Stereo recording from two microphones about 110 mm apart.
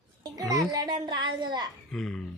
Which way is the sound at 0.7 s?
40° right (ahead or behind).